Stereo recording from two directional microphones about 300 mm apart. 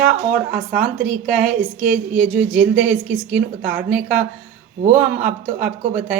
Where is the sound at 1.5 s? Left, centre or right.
Right.